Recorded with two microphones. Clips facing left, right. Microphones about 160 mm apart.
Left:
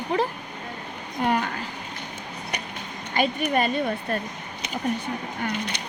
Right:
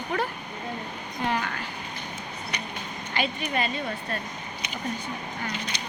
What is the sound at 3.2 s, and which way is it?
Speech, 45° left (ahead or behind).